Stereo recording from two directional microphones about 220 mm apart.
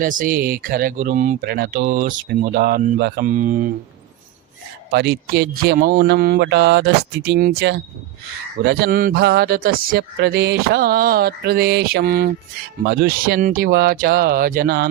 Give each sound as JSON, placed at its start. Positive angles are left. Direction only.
{"t": 0.0, "sound": "speech", "side_deg": -40}
{"t": 4.9, "sound": "speech", "side_deg": -50}